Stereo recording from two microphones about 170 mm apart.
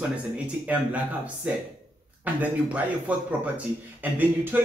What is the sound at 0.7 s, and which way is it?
Speech, 10° right (ahead or behind).